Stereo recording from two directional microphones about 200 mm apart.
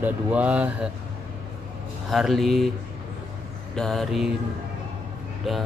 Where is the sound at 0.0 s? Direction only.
5° right (ahead or behind).